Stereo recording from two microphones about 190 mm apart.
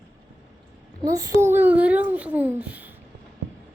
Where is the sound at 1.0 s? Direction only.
20° right (ahead or behind).